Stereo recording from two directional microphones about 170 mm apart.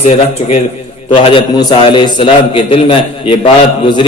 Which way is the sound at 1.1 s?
30° left (ahead or behind).